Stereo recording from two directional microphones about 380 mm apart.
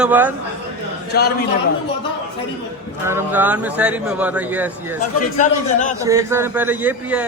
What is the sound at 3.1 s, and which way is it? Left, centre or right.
A man's voice, centre.